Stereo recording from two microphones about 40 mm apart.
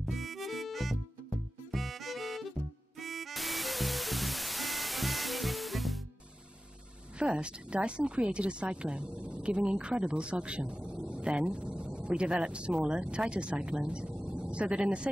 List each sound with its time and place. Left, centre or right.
0.0 s harmonica: centre
1.7 s music: centre
7.2 s speech: right